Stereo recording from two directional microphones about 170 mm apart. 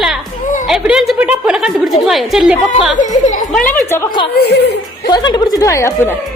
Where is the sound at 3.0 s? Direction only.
50° left (ahead or behind).